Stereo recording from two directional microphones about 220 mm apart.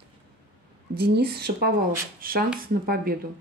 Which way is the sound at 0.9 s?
45° right (ahead or behind).